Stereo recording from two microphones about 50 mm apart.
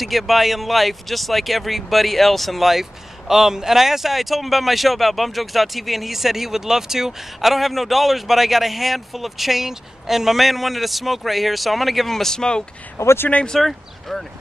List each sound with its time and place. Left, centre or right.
0.0 s speech: centre
12.9 s speech: left
13.6 s speech: centre